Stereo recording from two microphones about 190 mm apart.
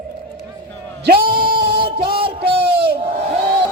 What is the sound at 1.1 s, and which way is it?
Singing, 50° right (ahead or behind).